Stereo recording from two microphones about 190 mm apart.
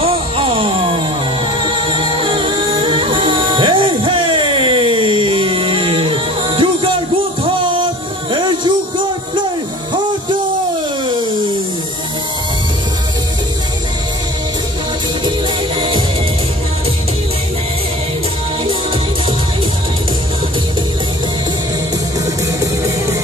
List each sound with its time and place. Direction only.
0.0 s music: 30° right (ahead or behind)
1.9 s music: 25° right (ahead or behind)
22.2 s music: 15° right (ahead or behind)